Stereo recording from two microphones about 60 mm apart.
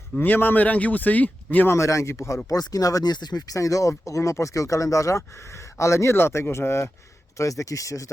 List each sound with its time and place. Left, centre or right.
0.2 s speech: left
1.7 s speech: left
2.5 s speech: left
7.3 s speech: left